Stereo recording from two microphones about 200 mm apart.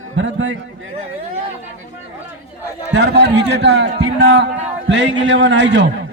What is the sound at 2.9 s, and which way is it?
A man's voice, 60° right (ahead or behind).